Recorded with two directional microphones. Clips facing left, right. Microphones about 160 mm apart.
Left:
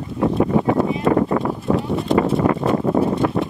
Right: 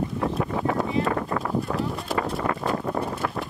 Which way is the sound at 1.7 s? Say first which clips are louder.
Left 7 dB; centre (ahead or behind).